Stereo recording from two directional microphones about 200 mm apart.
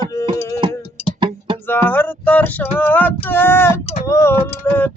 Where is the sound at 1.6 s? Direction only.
10° left (ahead or behind).